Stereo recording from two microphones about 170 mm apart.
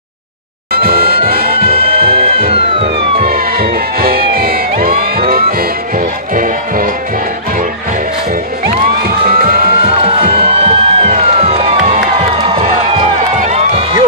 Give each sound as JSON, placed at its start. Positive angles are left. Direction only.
{"t": 0.7, "sound": "music", "side_deg": -60}
{"t": 2.5, "sound": "police car", "side_deg": -35}
{"t": 3.3, "sound": "music", "side_deg": -60}
{"t": 9.3, "sound": "music", "side_deg": -60}
{"t": 10.4, "sound": "music", "side_deg": -35}
{"t": 11.6, "sound": "crowd", "side_deg": -50}
{"t": 13.4, "sound": "music", "side_deg": -40}